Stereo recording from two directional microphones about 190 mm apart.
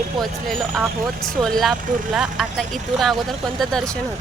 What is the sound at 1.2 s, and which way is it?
Speech, centre (ahead or behind).